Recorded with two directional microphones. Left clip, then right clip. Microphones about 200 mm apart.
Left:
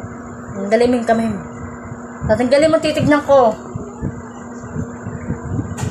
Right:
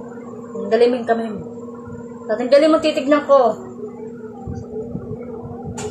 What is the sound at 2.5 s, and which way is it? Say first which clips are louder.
Speech: right 2 dB; 30° left (ahead or behind).